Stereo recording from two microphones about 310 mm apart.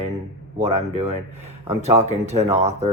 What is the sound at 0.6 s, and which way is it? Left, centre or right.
Speech, right.